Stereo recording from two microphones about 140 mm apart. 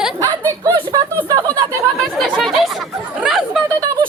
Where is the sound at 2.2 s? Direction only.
Centre (ahead or behind).